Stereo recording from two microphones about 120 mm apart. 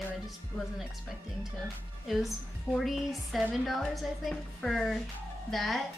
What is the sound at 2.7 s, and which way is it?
Speech, centre (ahead or behind).